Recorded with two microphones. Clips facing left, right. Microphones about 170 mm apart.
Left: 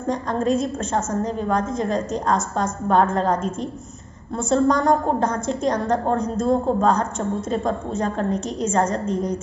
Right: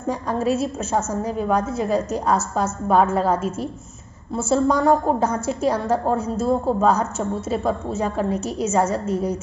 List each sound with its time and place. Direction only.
0.0 s a woman's voice: 10° right (ahead or behind)